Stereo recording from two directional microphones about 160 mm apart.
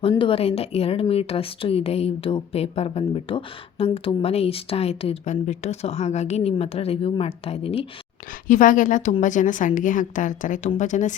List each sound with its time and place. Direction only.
0.1 s speech: 30° left (ahead or behind)
8.4 s a woman's voice: 55° left (ahead or behind)